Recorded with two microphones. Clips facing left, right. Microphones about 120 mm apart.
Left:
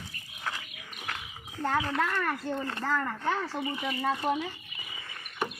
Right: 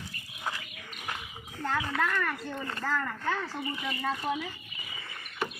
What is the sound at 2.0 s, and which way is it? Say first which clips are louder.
Speech: left 1 dB; 30° left (ahead or behind).